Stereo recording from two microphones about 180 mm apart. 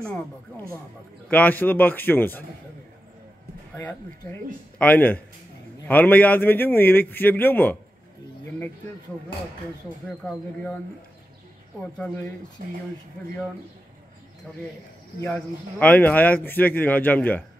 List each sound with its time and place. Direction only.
1.3 s speech: 10° left (ahead or behind)
3.7 s speech: 10° left (ahead or behind)
12.6 s speech: 50° right (ahead or behind)
15.2 s speech: 5° left (ahead or behind)